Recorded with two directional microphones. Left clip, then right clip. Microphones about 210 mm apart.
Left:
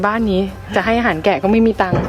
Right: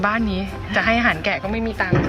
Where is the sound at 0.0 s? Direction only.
30° left (ahead or behind).